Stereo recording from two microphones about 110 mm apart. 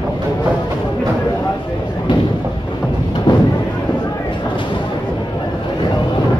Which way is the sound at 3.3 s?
45° left (ahead or behind).